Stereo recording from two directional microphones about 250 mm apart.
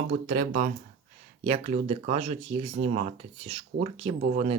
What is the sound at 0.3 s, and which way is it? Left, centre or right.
Speech, right.